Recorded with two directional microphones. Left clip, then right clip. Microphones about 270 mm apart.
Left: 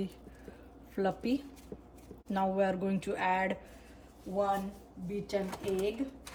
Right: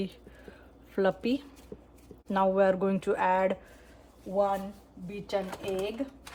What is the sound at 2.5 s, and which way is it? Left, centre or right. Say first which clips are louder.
Speech: right 6 dB; centre.